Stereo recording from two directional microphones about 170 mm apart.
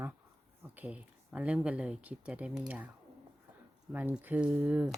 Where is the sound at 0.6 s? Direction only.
10° right (ahead or behind).